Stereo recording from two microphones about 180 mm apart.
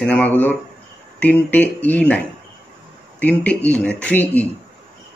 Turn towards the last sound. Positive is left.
turn(degrees=10)  # may be behind; listen again after turning